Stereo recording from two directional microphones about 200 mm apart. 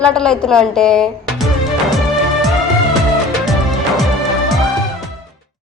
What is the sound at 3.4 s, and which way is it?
Music, centre (ahead or behind).